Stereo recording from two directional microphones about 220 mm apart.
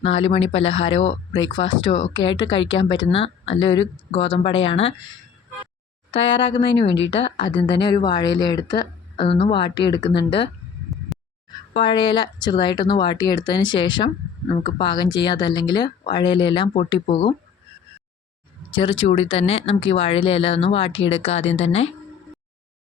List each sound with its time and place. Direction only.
0.0 s speech: 25° left (ahead or behind)
6.1 s speech: 25° left (ahead or behind)
6.8 s speech: 55° left (ahead or behind)
7.1 s speech: 25° left (ahead or behind)
11.1 s a sound: centre (ahead or behind)
11.7 s speech: 20° left (ahead or behind)
18.7 s speech: 25° left (ahead or behind)